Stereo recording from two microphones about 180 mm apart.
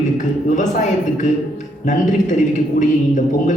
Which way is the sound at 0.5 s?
45° left (ahead or behind).